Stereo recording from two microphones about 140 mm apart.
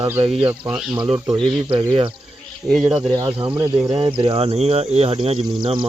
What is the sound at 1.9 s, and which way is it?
Cricket, 40° right (ahead or behind).